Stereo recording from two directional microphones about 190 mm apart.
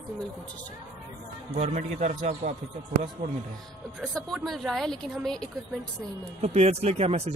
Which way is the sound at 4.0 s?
Centre (ahead or behind).